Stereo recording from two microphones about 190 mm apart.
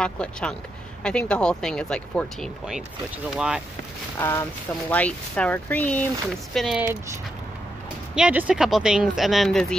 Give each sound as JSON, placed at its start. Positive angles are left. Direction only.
{"t": 0.0, "sound": "speech", "side_deg": 5}
{"t": 4.2, "sound": "speech", "side_deg": 10}
{"t": 8.1, "sound": "speech", "side_deg": -5}